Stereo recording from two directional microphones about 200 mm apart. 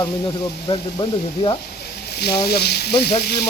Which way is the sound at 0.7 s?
25° left (ahead or behind).